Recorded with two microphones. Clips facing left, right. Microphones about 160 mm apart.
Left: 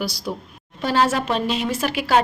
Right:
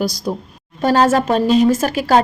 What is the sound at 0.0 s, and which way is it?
A woman's voice, 45° right (ahead or behind).